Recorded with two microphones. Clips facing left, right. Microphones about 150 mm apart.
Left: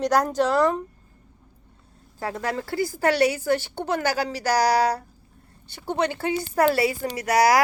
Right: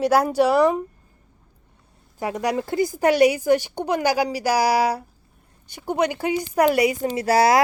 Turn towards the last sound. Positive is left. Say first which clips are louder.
# right 2 dB
turn(degrees=-30)  # may be behind; listen again after turning